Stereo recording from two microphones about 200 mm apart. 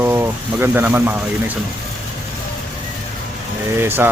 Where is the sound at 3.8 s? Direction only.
10° right (ahead or behind).